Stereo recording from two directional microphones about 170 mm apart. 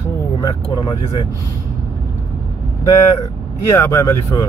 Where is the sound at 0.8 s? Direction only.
25° left (ahead or behind).